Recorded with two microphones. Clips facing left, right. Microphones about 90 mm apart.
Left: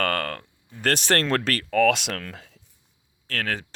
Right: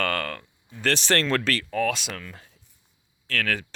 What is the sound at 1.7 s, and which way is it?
Speech, 75° left (ahead or behind).